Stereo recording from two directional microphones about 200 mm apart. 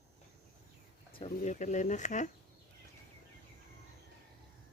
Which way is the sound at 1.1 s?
30° left (ahead or behind).